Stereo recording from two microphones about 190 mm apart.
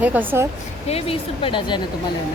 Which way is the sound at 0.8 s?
30° left (ahead or behind).